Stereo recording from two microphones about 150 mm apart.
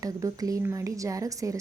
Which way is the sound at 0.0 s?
25° right (ahead or behind).